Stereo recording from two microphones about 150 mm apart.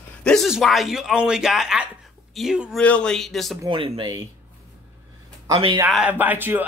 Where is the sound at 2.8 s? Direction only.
5° left (ahead or behind).